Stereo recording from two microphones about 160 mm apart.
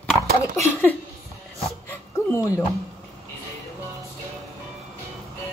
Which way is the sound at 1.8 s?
20° left (ahead or behind).